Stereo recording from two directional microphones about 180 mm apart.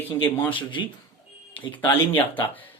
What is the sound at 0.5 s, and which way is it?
Speech, 25° left (ahead or behind).